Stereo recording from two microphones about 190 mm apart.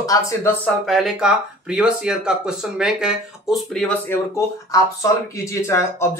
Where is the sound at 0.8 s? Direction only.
Centre (ahead or behind).